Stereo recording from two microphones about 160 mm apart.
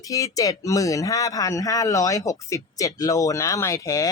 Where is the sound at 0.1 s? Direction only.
20° left (ahead or behind).